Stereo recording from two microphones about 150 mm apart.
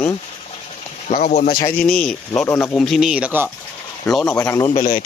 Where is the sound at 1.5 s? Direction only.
80° left.